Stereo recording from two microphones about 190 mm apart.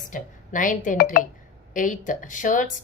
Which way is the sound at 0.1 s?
45° left (ahead or behind).